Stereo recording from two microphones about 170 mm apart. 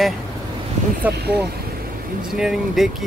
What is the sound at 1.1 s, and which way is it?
Speech, 70° right (ahead or behind).